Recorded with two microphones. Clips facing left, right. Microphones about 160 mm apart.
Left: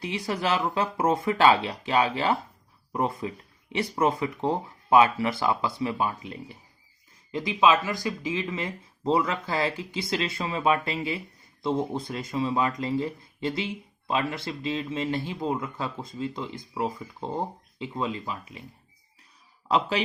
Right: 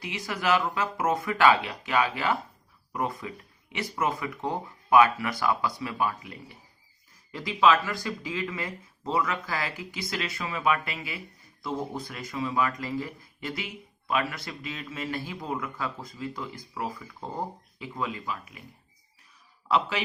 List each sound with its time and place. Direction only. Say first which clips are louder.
0.0 s speech: left 2 dB; 30° left (ahead or behind)
19.6 s speech: left 2 dB; 35° left (ahead or behind)